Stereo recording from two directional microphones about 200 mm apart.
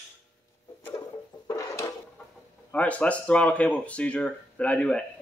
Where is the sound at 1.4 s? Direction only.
15° left (ahead or behind).